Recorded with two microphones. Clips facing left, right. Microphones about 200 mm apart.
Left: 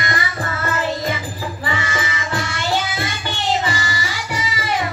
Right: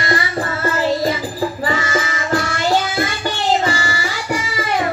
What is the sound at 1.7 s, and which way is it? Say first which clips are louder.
Child singing: right 4 dB; 40° right (ahead or behind).